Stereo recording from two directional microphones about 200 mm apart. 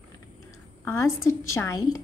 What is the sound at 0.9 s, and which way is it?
Speech, 15° left (ahead or behind).